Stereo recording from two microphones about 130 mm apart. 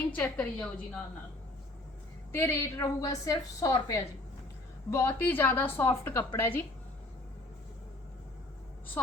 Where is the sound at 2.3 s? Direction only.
20° left (ahead or behind).